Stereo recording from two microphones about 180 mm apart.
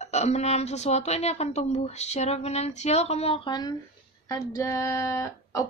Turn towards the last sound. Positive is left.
turn(degrees=15)  # may be behind; listen again after turning